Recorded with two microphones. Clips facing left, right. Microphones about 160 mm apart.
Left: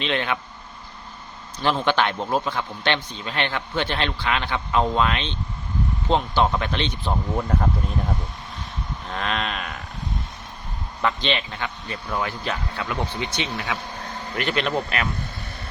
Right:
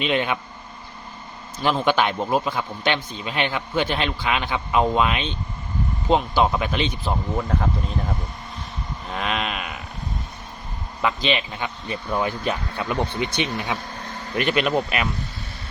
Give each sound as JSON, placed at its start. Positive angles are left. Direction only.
{"t": 0.0, "sound": "a man's voice", "side_deg": -10}
{"t": 1.6, "sound": "a man's voice", "side_deg": -10}
{"t": 11.0, "sound": "a man's voice", "side_deg": -10}
{"t": 14.3, "sound": "a man's voice", "side_deg": -15}